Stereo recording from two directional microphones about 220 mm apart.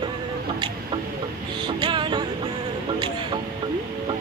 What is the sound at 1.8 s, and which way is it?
Music, 20° right (ahead or behind).